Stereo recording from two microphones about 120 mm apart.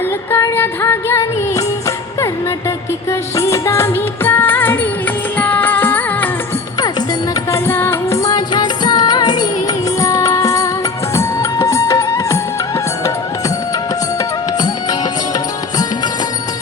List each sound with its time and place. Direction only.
0.3 s music: 20° left (ahead or behind)
7.5 s music: 20° left (ahead or behind)